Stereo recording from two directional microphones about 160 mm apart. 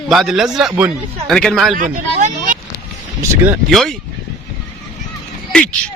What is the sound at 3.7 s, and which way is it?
Speech, centre (ahead or behind).